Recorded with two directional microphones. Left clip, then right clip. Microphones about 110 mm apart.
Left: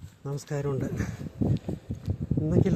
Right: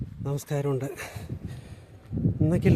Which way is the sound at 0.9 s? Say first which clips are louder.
Even; 90° right.